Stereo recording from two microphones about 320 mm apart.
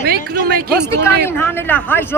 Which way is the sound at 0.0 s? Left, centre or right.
Right.